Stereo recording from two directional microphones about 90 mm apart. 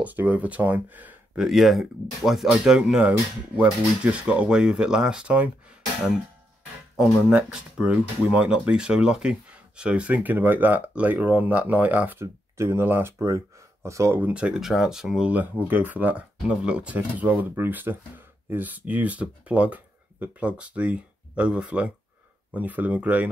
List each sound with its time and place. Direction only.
0.0 s speech: 20° right (ahead or behind)
1.3 s speech: centre (ahead or behind); by 14.2 s 30° right (ahead or behind)
14.2 s speech: 10° right (ahead or behind)